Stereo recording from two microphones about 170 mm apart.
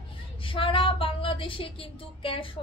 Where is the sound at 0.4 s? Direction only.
30° left (ahead or behind).